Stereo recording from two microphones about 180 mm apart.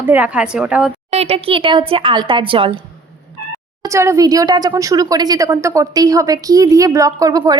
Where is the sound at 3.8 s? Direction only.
15° right (ahead or behind).